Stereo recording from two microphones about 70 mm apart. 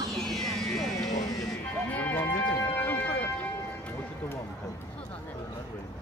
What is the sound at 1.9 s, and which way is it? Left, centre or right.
Music, left.